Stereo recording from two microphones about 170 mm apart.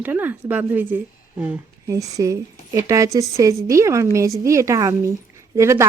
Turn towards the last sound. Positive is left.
turn(degrees=-15)  # may be behind; listen again after turning